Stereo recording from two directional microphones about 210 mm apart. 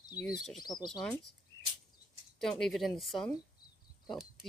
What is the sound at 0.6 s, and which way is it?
Speech, 20° left (ahead or behind).